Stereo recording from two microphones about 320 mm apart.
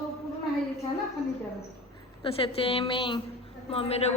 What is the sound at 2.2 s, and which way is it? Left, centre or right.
A woman's voice, centre.